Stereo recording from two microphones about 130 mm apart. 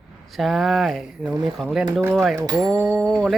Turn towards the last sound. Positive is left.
turn(degrees=5)  # may be behind; listen again after turning